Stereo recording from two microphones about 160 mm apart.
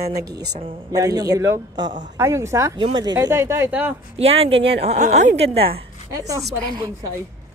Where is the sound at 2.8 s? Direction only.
30° right (ahead or behind).